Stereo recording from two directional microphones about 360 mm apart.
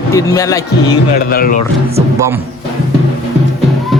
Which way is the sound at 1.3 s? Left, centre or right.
Left.